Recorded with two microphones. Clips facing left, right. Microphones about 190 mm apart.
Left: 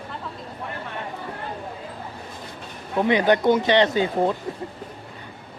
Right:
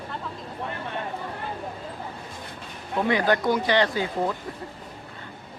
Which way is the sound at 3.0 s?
20° left (ahead or behind).